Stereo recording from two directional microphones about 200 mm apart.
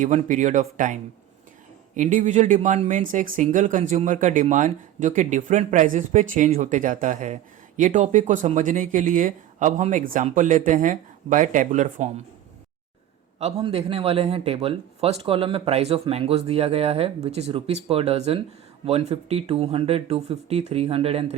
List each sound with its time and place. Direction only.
0.0 s speech: 40° right (ahead or behind)
2.0 s speech: 40° right (ahead or behind)
13.4 s a man's voice: 30° right (ahead or behind)